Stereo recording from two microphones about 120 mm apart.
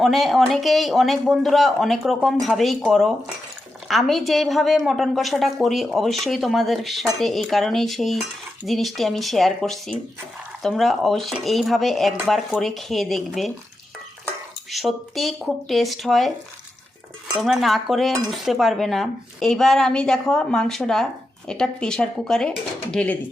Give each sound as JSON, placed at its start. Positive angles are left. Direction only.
{"t": 0.0, "sound": "speech", "side_deg": 0}
{"t": 14.7, "sound": "speech", "side_deg": 0}
{"t": 17.4, "sound": "speech", "side_deg": 0}